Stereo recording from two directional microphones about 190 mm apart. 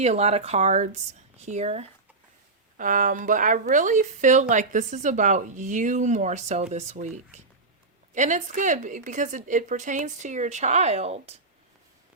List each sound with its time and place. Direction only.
0.0 s speech: 35° right (ahead or behind)